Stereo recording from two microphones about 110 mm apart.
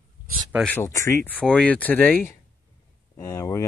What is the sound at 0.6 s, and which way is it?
Speech, 15° left (ahead or behind).